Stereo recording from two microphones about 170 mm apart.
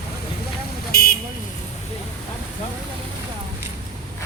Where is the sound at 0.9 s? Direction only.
65° left (ahead or behind).